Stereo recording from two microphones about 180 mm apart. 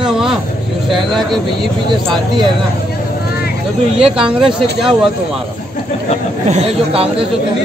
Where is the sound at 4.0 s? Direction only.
5° right (ahead or behind).